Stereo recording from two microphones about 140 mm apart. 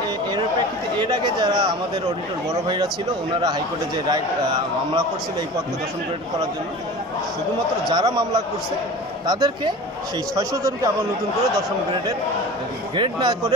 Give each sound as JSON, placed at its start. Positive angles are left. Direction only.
{"t": 0.9, "sound": "a man's voice", "side_deg": -35}
{"t": 7.9, "sound": "a man's voice", "side_deg": -30}
{"t": 12.9, "sound": "speech", "side_deg": -35}